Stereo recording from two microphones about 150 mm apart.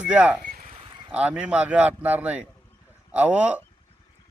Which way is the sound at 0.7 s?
40° right (ahead or behind).